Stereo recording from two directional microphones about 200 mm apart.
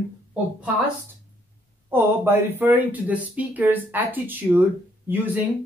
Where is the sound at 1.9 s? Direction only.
10° right (ahead or behind).